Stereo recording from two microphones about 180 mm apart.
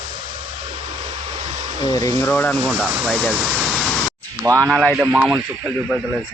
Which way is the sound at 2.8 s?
10° right (ahead or behind).